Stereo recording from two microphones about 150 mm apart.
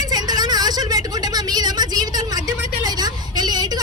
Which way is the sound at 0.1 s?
25° right (ahead or behind).